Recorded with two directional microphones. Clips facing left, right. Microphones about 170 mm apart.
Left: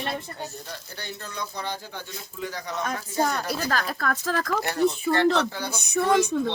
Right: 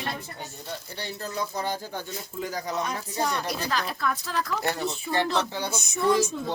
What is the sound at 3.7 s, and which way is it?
Speech, 45° left (ahead or behind).